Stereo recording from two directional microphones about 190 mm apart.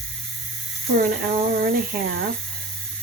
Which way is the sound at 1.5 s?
50° right (ahead or behind).